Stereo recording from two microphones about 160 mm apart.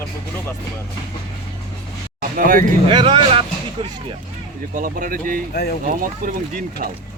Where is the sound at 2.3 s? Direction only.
60° right (ahead or behind).